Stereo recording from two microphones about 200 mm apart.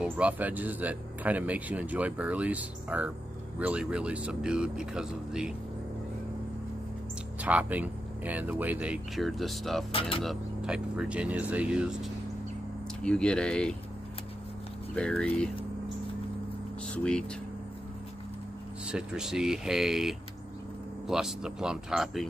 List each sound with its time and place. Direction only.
0.0 s speech: 5° right (ahead or behind)
7.3 s speech: 5° right (ahead or behind)
9.9 s speech: 25° left (ahead or behind)
10.2 s speech: 5° right (ahead or behind)
15.0 s speech: 5° left (ahead or behind)
16.8 s speech: 5° left (ahead or behind)
18.9 s speech: 5° right (ahead or behind)